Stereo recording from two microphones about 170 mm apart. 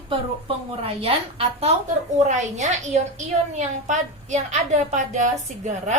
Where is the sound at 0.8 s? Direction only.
35° right (ahead or behind).